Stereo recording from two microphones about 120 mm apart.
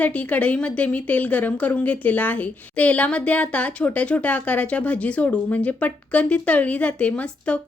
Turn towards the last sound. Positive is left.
turn(degrees=10)  # may be behind; listen again after turning